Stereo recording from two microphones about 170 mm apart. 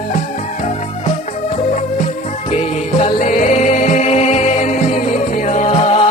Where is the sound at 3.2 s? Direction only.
45° left (ahead or behind).